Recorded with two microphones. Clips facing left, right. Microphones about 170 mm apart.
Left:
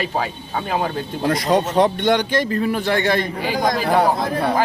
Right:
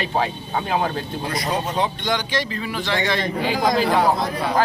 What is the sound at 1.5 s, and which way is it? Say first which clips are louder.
A man's voice: left 7 dB; 65° left (ahead or behind).